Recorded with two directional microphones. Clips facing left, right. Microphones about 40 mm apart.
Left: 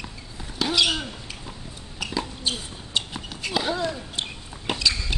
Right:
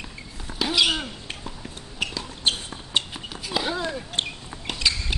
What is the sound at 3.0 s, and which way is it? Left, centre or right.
Horse, right.